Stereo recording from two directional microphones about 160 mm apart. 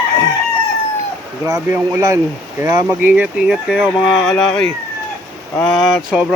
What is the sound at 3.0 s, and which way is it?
Speech, 10° right (ahead or behind).